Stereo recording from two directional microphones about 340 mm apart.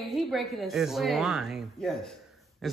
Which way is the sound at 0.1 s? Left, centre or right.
Centre.